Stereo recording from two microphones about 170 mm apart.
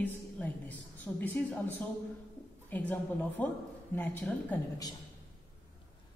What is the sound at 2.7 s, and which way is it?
A woman's voice, 10° left (ahead or behind).